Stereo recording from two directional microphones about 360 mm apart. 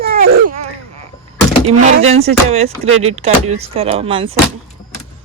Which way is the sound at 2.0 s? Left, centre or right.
Centre.